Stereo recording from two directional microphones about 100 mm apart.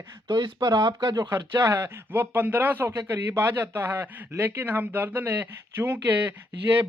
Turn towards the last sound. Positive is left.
turn(degrees=-20)  # may be behind; listen again after turning